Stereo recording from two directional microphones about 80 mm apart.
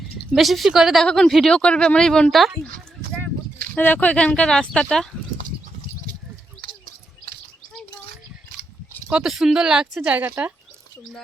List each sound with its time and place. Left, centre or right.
0.3 s a woman's voice: centre
1.0 s speech: centre
3.8 s speech: left
9.0 s speech: centre
10.0 s speech: right